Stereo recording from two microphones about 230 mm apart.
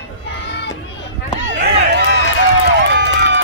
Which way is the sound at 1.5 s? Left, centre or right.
Right.